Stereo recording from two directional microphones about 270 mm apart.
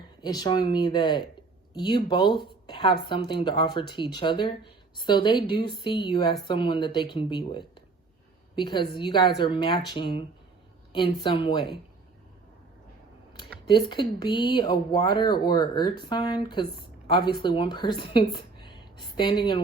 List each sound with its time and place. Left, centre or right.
0.2 s speech: centre
13.7 s speech: centre